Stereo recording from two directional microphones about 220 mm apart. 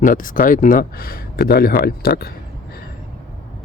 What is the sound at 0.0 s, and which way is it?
Speech, 35° left (ahead or behind).